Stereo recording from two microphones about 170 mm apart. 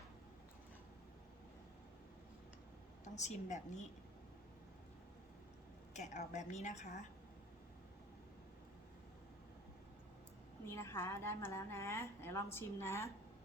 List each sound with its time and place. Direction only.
3.0 s a woman's voice: 45° left (ahead or behind)
5.9 s a woman's voice: 45° left (ahead or behind)
10.7 s a woman's voice: 15° left (ahead or behind)